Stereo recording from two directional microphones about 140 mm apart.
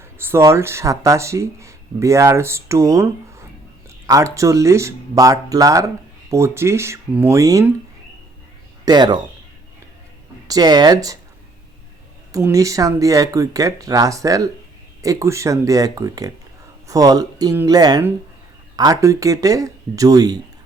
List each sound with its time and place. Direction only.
0.0 s speech: 15° right (ahead or behind)
8.8 s speech: 30° right (ahead or behind)
10.5 s speech: 30° right (ahead or behind)
12.3 s speech: 25° right (ahead or behind)